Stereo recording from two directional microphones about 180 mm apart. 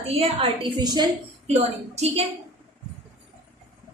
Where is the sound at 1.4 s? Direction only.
35° right (ahead or behind).